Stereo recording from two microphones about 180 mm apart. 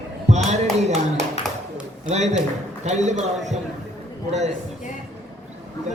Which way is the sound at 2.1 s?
40° right (ahead or behind).